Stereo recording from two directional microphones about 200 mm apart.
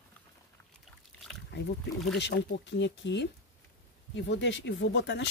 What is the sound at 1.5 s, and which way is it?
Speech, 60° left (ahead or behind).